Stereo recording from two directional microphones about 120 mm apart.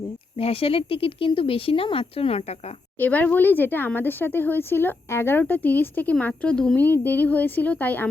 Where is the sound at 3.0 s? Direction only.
15° left (ahead or behind).